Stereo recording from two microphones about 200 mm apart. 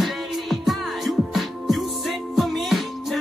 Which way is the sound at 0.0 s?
Centre (ahead or behind).